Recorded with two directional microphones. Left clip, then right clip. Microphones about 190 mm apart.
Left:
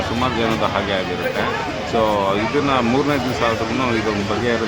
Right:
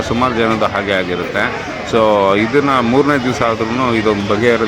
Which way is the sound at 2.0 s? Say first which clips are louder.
Right 7 dB; 20° right (ahead or behind).